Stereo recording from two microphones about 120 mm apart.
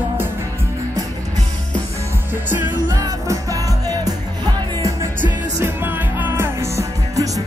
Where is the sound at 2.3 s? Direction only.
15° right (ahead or behind).